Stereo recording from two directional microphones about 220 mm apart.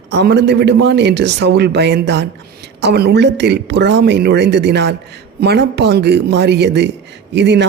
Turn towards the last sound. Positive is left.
turn(degrees=-50)  # may be behind; listen again after turning